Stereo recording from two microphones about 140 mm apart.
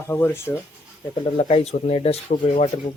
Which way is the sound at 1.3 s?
50° left (ahead or behind).